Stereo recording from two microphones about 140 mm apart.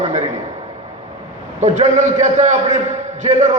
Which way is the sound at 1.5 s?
55° right (ahead or behind).